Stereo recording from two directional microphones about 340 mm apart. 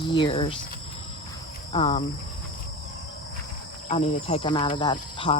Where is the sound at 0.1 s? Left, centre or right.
Centre.